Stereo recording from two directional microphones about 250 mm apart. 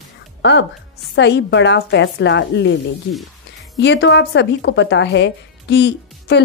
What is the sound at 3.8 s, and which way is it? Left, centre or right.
A woman's voice, left.